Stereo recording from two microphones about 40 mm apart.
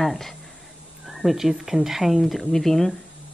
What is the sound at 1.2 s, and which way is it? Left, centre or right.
Speech, centre.